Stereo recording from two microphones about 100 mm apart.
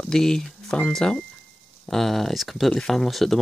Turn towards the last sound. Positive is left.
turn(degrees=0)  # may be behind; listen again after turning